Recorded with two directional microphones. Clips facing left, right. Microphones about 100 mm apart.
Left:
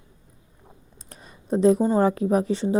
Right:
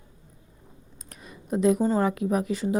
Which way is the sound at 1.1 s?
30° left (ahead or behind).